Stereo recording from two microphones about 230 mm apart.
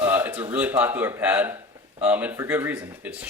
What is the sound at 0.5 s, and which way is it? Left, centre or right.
Speech, centre.